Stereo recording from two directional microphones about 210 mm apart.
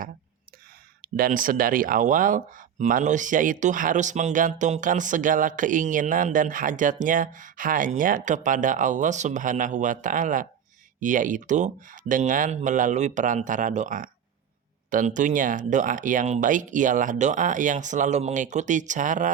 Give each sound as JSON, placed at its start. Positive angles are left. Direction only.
{"t": 1.0, "sound": "speech", "side_deg": -45}